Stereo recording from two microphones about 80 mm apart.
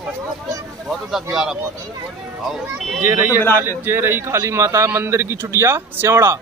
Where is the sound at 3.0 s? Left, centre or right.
Right.